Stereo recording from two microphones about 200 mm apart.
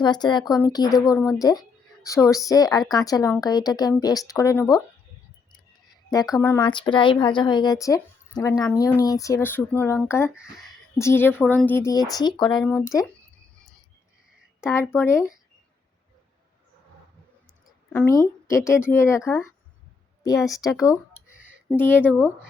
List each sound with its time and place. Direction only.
0.0 s speech: 20° left (ahead or behind)
6.1 s speech: 20° left (ahead or behind)
14.9 s speech: 15° left (ahead or behind)
17.9 s speech: 15° left (ahead or behind)
20.7 s speech: 15° left (ahead or behind)